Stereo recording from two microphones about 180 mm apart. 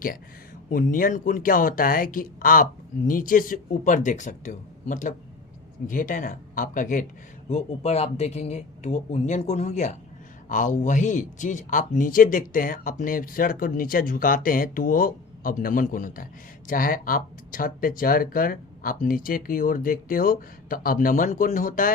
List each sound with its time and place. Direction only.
0.7 s speech: 50° left (ahead or behind)